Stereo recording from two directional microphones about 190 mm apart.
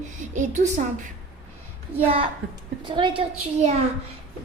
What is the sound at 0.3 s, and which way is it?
Speech, 40° right (ahead or behind).